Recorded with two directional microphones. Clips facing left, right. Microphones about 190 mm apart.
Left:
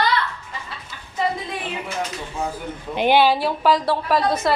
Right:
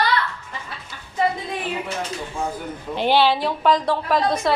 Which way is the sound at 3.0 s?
15° left (ahead or behind).